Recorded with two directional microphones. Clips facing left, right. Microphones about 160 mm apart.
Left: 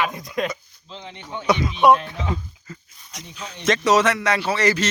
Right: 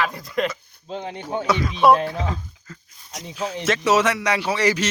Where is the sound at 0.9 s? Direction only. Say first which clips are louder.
Right 7 dB; 50° right (ahead or behind).